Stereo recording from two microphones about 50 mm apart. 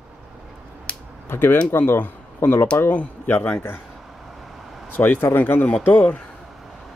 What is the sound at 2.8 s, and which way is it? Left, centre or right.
Speech, left.